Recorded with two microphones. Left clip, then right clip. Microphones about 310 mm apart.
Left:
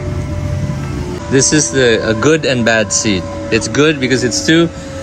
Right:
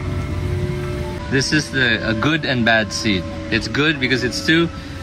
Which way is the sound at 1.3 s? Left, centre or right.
Centre.